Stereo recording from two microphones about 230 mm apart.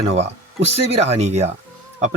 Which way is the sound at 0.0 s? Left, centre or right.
Right.